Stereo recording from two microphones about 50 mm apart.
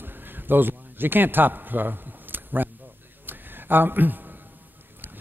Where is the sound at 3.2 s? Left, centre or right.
Right.